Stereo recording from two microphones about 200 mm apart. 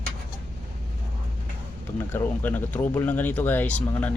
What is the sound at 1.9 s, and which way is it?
Speech, 10° left (ahead or behind).